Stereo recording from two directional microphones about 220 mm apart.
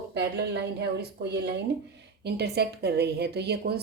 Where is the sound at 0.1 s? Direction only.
50° right (ahead or behind).